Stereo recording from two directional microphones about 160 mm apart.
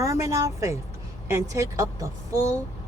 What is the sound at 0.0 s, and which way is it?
Speech, 20° right (ahead or behind).